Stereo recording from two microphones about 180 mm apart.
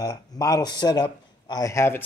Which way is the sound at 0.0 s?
20° left (ahead or behind).